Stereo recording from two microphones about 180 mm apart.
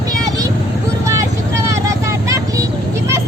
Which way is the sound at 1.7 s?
15° right (ahead or behind).